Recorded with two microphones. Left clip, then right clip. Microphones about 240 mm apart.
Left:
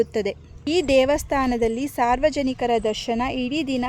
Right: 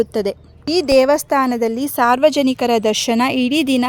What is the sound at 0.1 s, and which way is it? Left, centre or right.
Speech, right.